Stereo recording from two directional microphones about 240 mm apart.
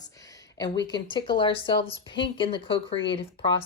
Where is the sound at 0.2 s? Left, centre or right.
Centre.